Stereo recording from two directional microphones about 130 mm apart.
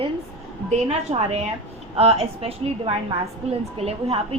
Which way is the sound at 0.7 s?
60° right (ahead or behind).